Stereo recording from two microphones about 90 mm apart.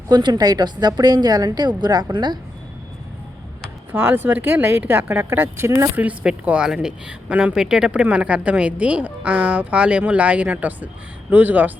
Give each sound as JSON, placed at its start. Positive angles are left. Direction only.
{"t": 0.1, "sound": "a woman's voice", "side_deg": -55}
{"t": 3.9, "sound": "speech", "side_deg": -20}
{"t": 5.5, "sound": "speech", "side_deg": -30}
{"t": 6.0, "sound": "a woman's voice", "side_deg": -15}